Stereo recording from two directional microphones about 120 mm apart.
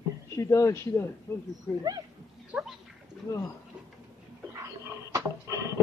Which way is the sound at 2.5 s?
15° right (ahead or behind).